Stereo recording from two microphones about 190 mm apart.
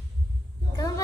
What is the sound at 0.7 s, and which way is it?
Speech, 15° left (ahead or behind).